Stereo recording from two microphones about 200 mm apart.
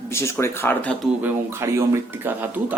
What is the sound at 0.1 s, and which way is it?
Speech, 15° left (ahead or behind).